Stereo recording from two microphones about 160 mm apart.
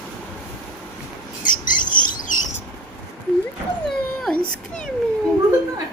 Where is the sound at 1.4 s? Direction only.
55° left (ahead or behind).